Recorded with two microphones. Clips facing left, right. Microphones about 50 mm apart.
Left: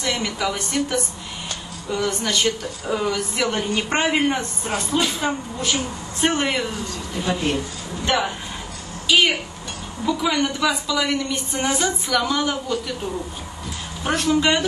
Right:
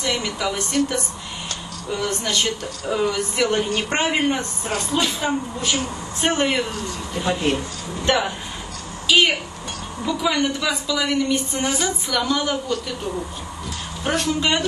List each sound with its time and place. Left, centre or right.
0.0 s speech: centre
8.0 s a sound: centre
9.0 s a woman's voice: centre
14.0 s speech: centre